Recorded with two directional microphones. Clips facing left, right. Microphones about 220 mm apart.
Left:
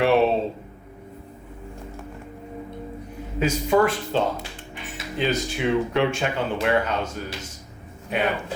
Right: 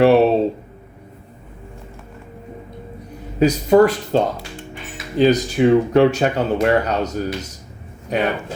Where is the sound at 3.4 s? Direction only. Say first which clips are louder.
Right 7 dB; 40° right (ahead or behind).